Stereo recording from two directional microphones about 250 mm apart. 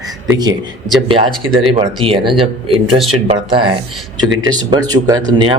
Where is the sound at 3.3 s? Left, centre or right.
Centre.